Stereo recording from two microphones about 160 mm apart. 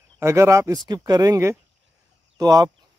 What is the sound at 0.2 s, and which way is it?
Speech, 15° right (ahead or behind).